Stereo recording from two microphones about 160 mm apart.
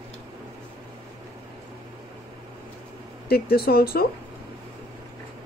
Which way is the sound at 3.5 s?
70° left (ahead or behind).